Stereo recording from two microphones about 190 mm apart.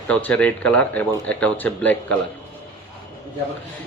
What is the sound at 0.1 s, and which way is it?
Speech, 5° left (ahead or behind).